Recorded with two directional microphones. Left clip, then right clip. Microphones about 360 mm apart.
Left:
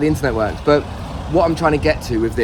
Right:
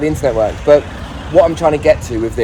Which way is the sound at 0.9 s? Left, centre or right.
Left.